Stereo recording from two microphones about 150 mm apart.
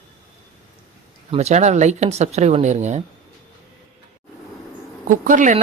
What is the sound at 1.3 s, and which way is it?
Speech, 45° right (ahead or behind).